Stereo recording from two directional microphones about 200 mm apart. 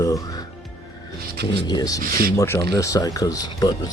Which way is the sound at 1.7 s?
20° left (ahead or behind).